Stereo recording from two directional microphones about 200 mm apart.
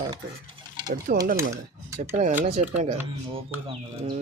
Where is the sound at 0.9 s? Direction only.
45° right (ahead or behind).